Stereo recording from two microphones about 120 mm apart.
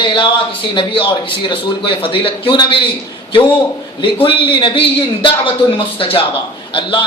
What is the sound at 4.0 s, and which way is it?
A man's voice, 45° left (ahead or behind).